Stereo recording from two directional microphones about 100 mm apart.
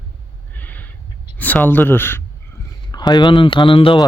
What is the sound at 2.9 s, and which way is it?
Speech, 45° left (ahead or behind).